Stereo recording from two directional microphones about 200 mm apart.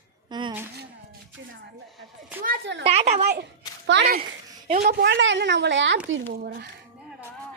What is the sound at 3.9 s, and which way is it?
A woman's voice, 65° right (ahead or behind).